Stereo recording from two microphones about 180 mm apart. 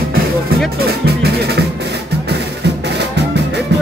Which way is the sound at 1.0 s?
65° right (ahead or behind).